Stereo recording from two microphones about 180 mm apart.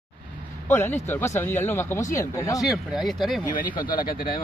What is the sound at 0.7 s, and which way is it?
Speech, 10° left (ahead or behind).